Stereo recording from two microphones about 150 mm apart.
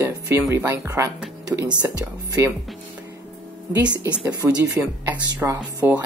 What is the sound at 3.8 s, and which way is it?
Speech, 30° right (ahead or behind).